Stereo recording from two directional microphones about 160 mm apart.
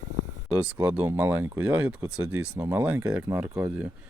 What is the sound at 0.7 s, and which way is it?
Speech, 10° right (ahead or behind).